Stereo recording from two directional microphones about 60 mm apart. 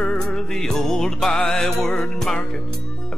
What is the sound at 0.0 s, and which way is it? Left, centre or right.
Music, centre.